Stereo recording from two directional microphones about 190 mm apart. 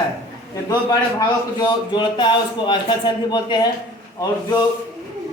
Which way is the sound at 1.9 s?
25° left (ahead or behind).